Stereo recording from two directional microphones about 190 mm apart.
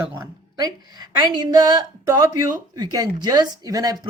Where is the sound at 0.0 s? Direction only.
15° right (ahead or behind).